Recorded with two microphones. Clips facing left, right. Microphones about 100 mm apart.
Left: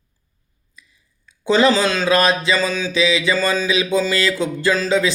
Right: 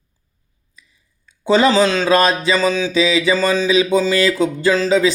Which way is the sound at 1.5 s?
20° right (ahead or behind).